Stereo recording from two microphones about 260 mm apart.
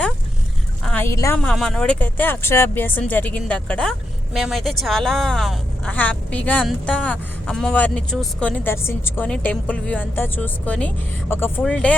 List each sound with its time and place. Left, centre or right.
0.9 s speech: centre